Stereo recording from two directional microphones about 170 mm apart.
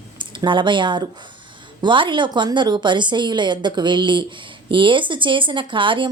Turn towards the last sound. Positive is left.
turn(degrees=-30)  # may be behind; listen again after turning